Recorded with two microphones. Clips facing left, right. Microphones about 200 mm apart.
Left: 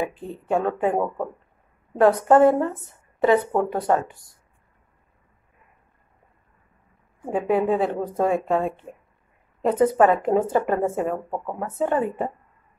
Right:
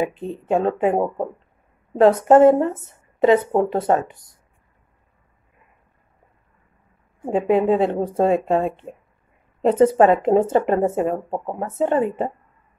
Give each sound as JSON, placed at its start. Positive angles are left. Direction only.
{"t": 0.0, "sound": "speech", "side_deg": -20}
{"t": 7.2, "sound": "a woman's voice", "side_deg": -20}